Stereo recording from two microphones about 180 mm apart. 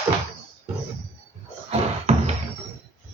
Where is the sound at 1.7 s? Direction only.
35° right (ahead or behind).